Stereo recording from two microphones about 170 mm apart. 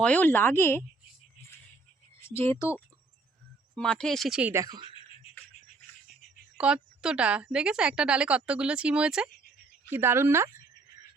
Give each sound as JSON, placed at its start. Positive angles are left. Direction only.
{"t": 0.0, "sound": "speech", "side_deg": 10}
{"t": 2.2, "sound": "speech", "side_deg": 15}
{"t": 3.8, "sound": "speech", "side_deg": 5}
{"t": 4.5, "sound": "speech", "side_deg": -20}
{"t": 4.9, "sound": "music", "side_deg": 30}
{"t": 6.6, "sound": "speech", "side_deg": -5}